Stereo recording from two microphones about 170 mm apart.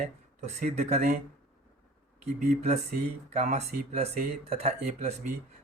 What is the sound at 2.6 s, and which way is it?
Speech, 40° right (ahead or behind).